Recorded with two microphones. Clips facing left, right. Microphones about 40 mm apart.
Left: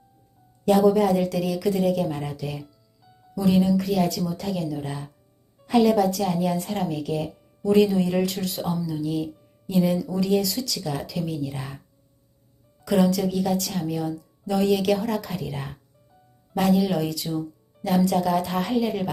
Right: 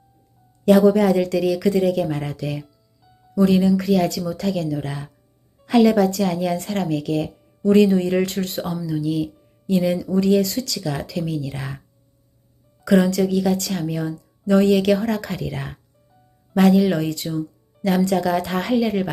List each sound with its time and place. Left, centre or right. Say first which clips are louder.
0.6 s speech: right 4 dB; right
3.0 s music: even; centre
3.3 s speech: right 4 dB; right
7.6 s speech: right 4 dB; right
8.9 s speech: right 4 dB; right
11.5 s speech: right 3 dB; right
13.1 s speech: right 4 dB; right
13.8 s speech: right 2 dB; right
17.8 s speech: right 2 dB; right